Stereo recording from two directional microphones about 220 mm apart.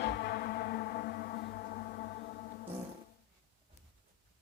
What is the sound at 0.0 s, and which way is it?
Music, 50° left (ahead or behind).